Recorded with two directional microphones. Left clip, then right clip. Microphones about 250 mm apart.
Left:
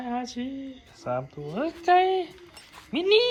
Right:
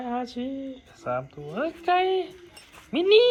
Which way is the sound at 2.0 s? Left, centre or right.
Left.